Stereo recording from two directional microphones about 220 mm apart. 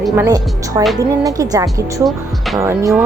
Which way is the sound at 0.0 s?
10° right (ahead or behind).